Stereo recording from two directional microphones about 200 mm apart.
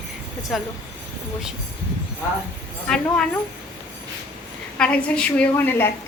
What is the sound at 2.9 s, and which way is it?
Speech, 5° left (ahead or behind).